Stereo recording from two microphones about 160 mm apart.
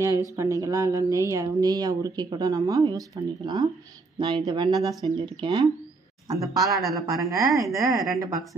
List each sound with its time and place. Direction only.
0.4 s speech: 20° right (ahead or behind)
6.6 s speech: centre (ahead or behind)
7.2 s speech: 20° right (ahead or behind)